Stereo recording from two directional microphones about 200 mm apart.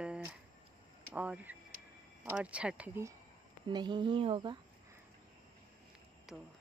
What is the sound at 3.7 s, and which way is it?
Speech, 20° right (ahead or behind).